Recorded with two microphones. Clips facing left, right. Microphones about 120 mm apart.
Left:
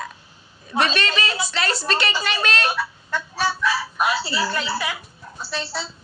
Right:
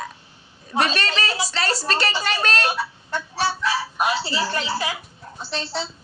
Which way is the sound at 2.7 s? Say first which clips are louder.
Even; 15° right (ahead or behind).